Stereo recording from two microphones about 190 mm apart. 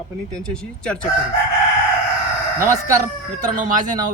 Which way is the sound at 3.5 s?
45° right (ahead or behind).